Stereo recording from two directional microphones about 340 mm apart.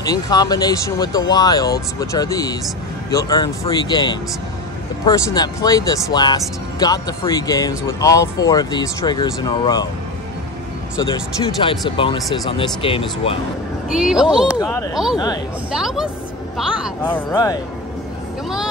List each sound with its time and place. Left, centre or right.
0.0 s speech: centre
11.6 s speech: centre
13.8 s speech: centre
14.6 s speech: centre
15.7 s speech: centre